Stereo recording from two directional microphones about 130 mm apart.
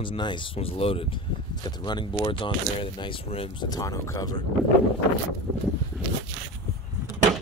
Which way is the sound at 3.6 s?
30° left (ahead or behind).